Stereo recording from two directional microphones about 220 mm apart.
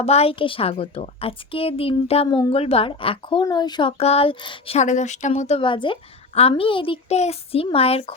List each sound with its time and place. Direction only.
0.0 s speech: 25° left (ahead or behind)